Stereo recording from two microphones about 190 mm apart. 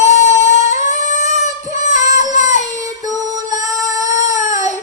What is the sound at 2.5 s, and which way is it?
Child singing, 40° right (ahead or behind).